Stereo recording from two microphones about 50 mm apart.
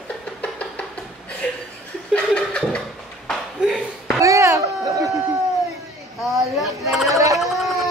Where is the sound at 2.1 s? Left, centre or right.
Left.